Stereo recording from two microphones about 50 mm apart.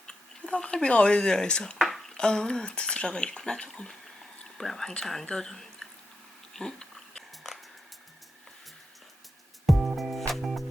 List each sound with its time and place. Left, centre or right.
0.1 s speech: centre
6.5 s a sound: centre
9.6 s music: centre